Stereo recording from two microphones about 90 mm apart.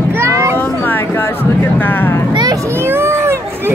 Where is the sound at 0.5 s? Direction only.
25° left (ahead or behind).